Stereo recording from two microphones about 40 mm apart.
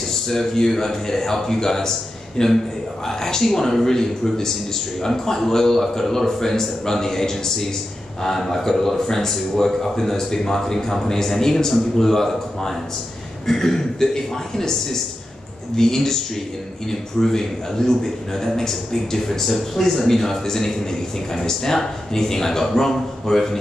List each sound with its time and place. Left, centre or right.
0.1 s a man's voice: centre